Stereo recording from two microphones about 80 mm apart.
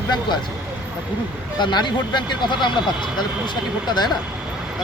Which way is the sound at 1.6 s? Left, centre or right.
Left.